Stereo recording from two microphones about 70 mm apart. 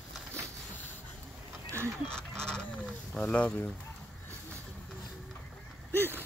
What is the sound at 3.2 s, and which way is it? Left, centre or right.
Speech, centre.